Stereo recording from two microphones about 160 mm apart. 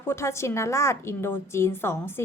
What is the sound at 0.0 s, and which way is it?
A woman's voice, 15° left (ahead or behind).